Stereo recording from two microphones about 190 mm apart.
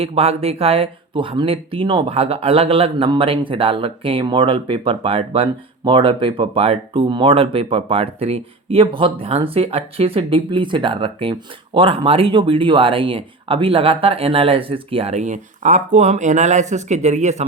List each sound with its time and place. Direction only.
0.0 s speech: 30° right (ahead or behind)